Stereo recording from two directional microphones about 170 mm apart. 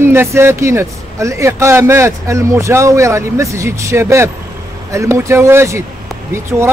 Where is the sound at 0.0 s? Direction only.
15° right (ahead or behind).